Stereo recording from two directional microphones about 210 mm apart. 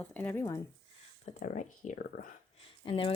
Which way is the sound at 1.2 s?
35° left (ahead or behind).